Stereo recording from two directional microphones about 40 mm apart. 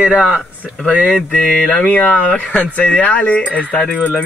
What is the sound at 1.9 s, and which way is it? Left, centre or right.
Speech, left.